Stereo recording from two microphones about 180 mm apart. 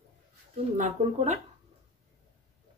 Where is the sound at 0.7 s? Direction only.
40° right (ahead or behind).